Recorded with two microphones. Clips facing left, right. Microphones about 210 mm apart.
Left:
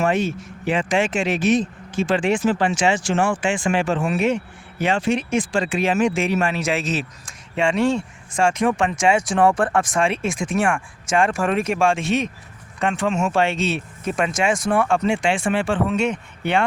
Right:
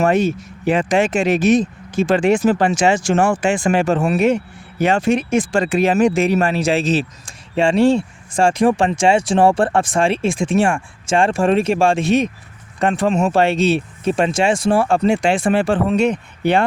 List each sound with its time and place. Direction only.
0.0 s speech: 40° right (ahead or behind)